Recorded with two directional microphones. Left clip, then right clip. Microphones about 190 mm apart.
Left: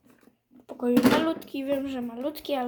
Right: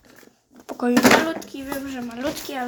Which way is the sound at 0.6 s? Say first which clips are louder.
Right 5 dB; 10° right (ahead or behind).